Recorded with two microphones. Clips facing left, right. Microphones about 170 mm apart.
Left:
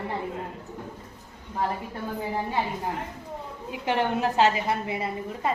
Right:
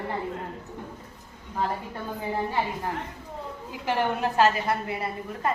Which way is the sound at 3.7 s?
20° left (ahead or behind).